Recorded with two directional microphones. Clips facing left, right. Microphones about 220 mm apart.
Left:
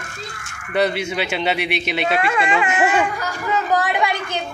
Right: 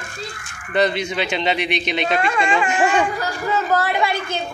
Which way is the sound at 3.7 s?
15° left (ahead or behind).